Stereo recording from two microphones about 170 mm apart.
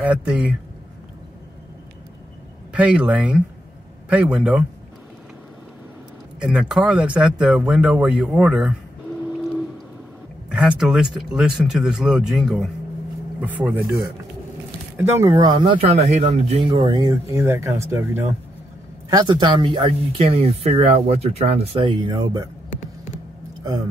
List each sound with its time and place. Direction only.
0.0 s speech: 5° right (ahead or behind)
2.7 s speech: 5° right (ahead or behind)
6.4 s speech: 5° right (ahead or behind)
10.5 s speech: 5° right (ahead or behind)
15.0 s speech: 15° right (ahead or behind)
15.3 s speech: 25° right (ahead or behind)
16.5 s speech: 30° right (ahead or behind)
19.0 s speech: 25° right (ahead or behind)